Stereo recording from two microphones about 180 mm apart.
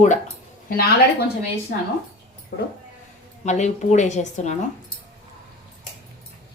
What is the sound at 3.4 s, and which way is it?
A woman's voice, 40° left (ahead or behind).